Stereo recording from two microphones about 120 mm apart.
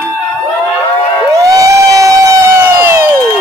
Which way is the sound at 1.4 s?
30° right (ahead or behind).